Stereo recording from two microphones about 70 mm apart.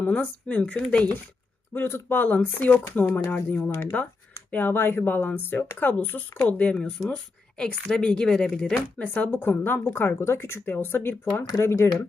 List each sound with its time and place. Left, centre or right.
0.0 s a woman's voice: centre
1.7 s speech: left
4.5 s a woman's voice: left; by 8.8 s centre
9.0 s speech: centre; by 12.0 s left